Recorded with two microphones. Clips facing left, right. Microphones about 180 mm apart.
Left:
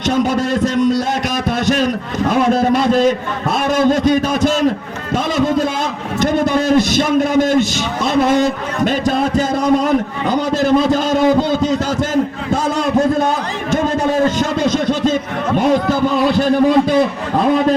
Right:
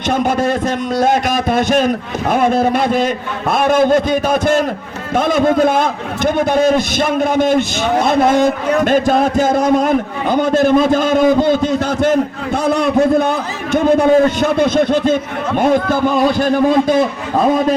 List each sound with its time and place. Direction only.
0.1 s a man's voice: 55° right (ahead or behind)